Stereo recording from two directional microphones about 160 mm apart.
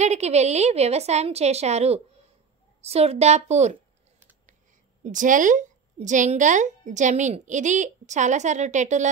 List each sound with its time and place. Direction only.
0.0 s a woman's voice: 45° right (ahead or behind)
5.0 s a woman's voice: 55° right (ahead or behind)